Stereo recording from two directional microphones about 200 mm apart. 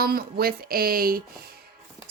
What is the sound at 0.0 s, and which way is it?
A woman's voice, 50° right (ahead or behind).